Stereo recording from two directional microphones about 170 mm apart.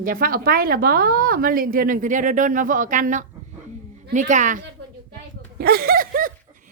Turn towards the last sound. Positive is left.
turn(degrees=-55)  # may be behind; listen again after turning